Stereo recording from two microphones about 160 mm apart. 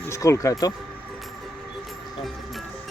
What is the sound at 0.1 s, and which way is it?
Speech, 20° left (ahead or behind).